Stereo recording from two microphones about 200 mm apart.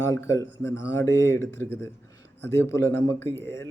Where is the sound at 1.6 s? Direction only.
60° right (ahead or behind).